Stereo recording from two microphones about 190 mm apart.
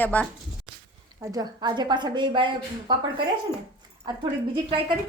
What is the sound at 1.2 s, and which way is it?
A woman's voice, 20° right (ahead or behind).